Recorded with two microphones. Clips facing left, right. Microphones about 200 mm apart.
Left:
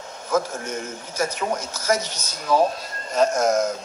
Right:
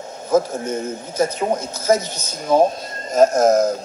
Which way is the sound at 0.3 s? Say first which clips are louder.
Right 6 dB; 30° right (ahead or behind).